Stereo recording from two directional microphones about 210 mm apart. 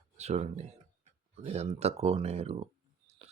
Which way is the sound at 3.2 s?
25° right (ahead or behind).